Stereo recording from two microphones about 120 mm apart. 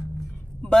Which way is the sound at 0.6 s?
5° left (ahead or behind).